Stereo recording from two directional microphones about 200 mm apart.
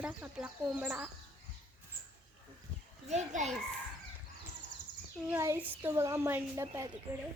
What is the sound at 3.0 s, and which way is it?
Speech, 35° right (ahead or behind).